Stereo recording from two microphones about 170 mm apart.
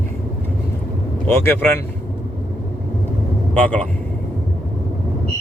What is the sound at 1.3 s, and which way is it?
Speech, 10° left (ahead or behind).